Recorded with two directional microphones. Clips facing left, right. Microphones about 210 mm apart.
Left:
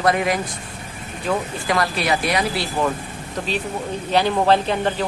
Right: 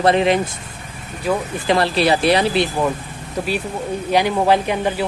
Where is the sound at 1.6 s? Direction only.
30° right (ahead or behind).